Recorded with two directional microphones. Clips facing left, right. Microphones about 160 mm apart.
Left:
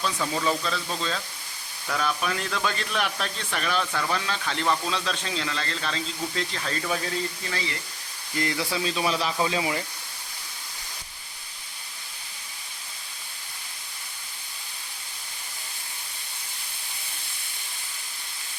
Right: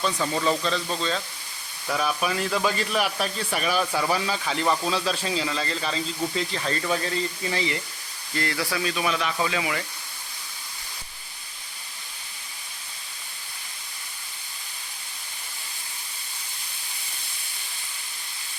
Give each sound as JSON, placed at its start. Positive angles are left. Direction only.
{"t": 0.0, "sound": "speech", "side_deg": 0}
{"t": 7.5, "sound": "speech", "side_deg": -20}
{"t": 8.4, "sound": "speech", "side_deg": 15}